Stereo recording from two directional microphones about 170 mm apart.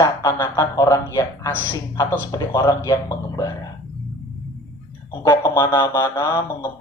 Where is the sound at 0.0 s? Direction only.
20° left (ahead or behind).